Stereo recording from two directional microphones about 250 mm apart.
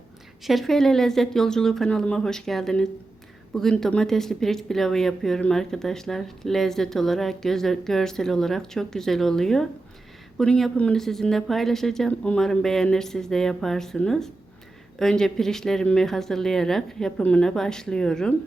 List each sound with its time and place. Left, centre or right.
0.4 s speech: centre